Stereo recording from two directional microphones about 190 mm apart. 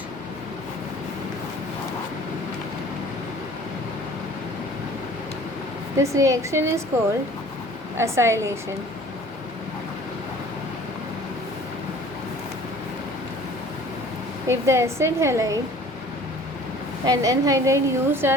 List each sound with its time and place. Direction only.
6.0 s a woman's voice: 15° right (ahead or behind)
7.9 s a woman's voice: 15° right (ahead or behind)
14.4 s a woman's voice: 15° right (ahead or behind)
17.1 s a woman's voice: 20° right (ahead or behind)